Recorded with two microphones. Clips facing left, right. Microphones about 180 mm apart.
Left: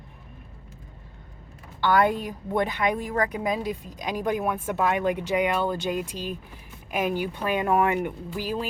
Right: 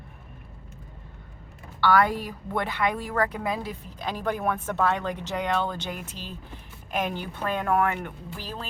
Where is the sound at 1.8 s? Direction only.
20° left (ahead or behind).